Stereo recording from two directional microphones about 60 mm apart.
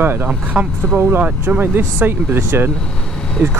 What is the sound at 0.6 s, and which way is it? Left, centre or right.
Speech, centre.